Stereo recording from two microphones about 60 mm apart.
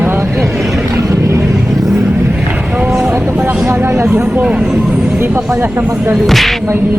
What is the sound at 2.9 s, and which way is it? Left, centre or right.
Vehicle, centre.